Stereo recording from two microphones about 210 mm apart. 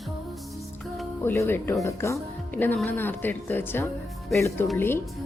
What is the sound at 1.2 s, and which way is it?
Speech, 10° left (ahead or behind).